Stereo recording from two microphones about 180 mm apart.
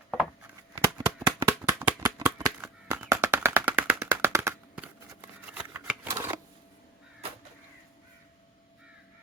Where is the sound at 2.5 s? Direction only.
10° right (ahead or behind).